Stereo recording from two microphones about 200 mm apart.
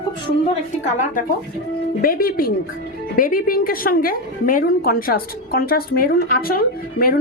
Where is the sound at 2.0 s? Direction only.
45° left (ahead or behind).